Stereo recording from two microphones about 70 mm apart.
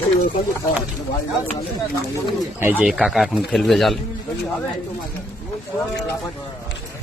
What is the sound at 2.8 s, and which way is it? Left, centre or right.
Speech, centre.